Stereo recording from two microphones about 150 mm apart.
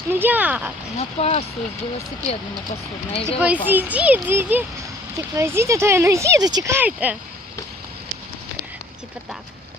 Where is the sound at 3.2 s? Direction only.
10° right (ahead or behind).